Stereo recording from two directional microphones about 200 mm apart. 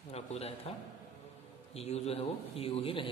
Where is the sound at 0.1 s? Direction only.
30° left (ahead or behind).